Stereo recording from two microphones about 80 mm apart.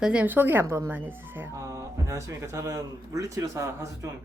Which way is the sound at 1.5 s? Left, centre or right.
Right.